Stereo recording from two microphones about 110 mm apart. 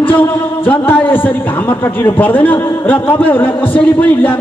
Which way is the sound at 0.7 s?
15° left (ahead or behind).